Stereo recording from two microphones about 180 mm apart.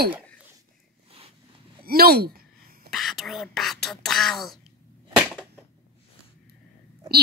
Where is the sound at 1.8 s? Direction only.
55° right (ahead or behind).